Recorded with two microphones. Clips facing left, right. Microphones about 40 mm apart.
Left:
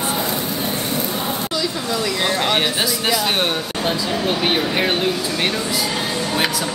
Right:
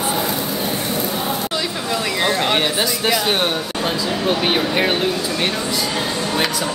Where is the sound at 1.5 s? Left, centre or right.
Right.